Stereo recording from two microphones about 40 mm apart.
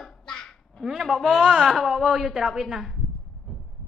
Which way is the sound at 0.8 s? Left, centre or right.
Centre.